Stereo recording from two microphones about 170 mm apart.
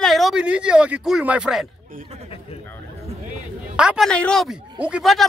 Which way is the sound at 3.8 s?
5° right (ahead or behind).